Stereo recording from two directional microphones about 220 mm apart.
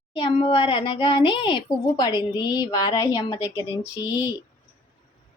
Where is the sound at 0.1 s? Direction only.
25° left (ahead or behind).